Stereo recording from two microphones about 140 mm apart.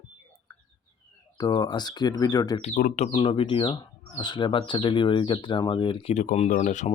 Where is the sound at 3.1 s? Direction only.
40° left (ahead or behind).